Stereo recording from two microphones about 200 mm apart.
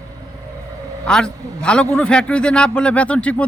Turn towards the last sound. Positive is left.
turn(degrees=5)  # may be behind; listen again after turning